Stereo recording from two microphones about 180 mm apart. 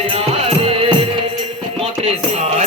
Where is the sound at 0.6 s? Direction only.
30° right (ahead or behind).